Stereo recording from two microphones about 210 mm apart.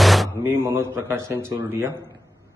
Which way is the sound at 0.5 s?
10° right (ahead or behind).